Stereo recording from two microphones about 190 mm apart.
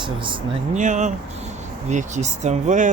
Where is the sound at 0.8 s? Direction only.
40° right (ahead or behind).